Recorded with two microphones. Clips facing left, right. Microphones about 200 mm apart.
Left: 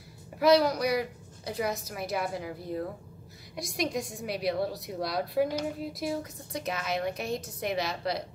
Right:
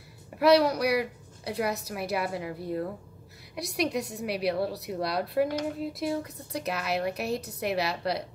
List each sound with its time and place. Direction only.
0.4 s speech: centre (ahead or behind)
3.8 s a woman's voice: 65° right (ahead or behind)
4.1 s speech: 5° right (ahead or behind)